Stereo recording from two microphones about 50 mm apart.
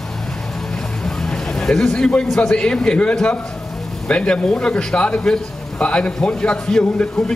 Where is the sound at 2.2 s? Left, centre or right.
Centre.